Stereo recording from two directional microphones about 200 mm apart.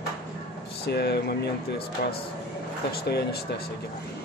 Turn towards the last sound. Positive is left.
turn(degrees=55)  # may be behind; listen again after turning